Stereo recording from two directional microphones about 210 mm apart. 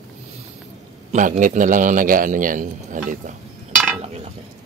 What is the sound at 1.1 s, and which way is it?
Speech, 35° right (ahead or behind).